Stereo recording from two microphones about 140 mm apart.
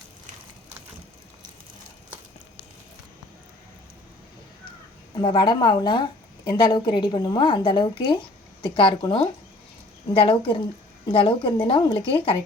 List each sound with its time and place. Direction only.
5.2 s a woman's voice: 35° left (ahead or behind)